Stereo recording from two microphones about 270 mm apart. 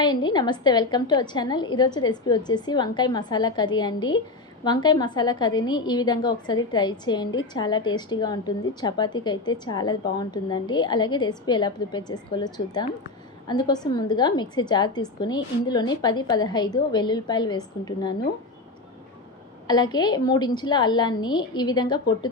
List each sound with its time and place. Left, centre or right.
0.0 s a woman's voice: centre
19.6 s a woman's voice: centre